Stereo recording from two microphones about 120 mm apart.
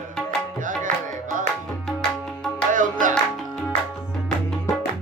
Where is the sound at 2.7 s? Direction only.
90° right.